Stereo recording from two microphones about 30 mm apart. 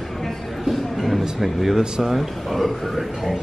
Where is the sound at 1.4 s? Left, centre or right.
Centre.